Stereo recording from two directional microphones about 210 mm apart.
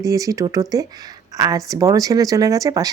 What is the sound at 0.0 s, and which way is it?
Speech, 15° right (ahead or behind).